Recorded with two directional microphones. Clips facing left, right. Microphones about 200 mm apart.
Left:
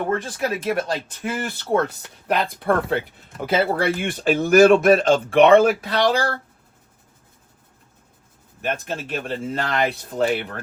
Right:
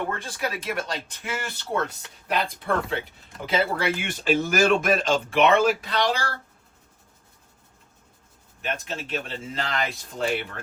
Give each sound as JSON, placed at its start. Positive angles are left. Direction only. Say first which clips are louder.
{"t": 0.3, "sound": "speech", "louder": "left 6 dB", "side_deg": 45}
{"t": 8.6, "sound": "speech", "louder": "left 5 dB", "side_deg": 50}